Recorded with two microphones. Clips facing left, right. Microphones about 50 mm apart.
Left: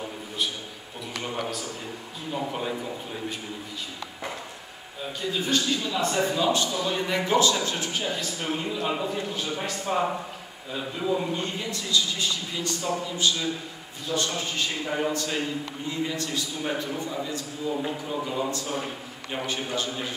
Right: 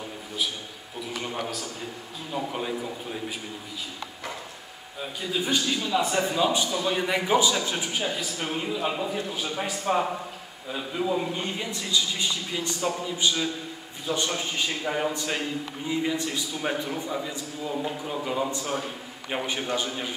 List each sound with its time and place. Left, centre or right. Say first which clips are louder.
1.2 s a man's voice: left 3 dB; centre
5.3 s a man's voice: even; centre
11.3 s a man's voice: even; centre